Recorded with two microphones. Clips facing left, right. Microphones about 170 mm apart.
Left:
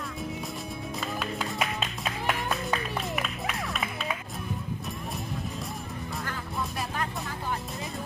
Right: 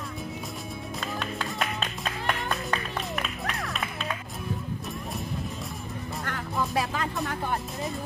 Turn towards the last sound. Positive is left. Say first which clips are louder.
# right 3 dB
turn(degrees=-70)  # may be behind; listen again after turning